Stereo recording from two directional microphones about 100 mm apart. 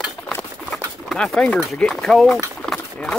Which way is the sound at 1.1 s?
5° left (ahead or behind).